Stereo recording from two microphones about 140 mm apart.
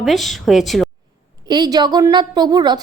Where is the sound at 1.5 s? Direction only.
30° right (ahead or behind).